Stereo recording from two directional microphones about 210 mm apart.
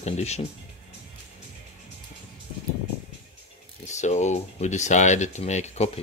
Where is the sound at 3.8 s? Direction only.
35° left (ahead or behind).